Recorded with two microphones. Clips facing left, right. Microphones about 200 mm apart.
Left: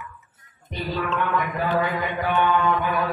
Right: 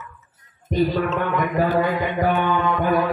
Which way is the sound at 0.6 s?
45° right (ahead or behind).